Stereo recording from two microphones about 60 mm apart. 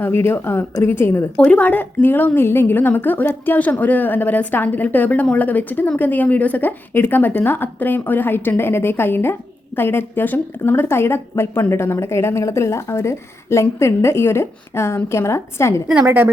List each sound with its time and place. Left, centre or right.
0.0 s a woman's voice: left
1.4 s a woman's voice: left
16.0 s a woman's voice: right